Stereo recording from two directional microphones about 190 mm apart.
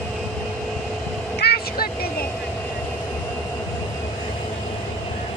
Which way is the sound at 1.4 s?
55° left (ahead or behind).